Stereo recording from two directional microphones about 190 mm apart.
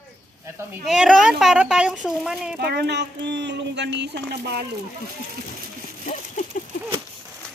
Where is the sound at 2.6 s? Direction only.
60° right (ahead or behind).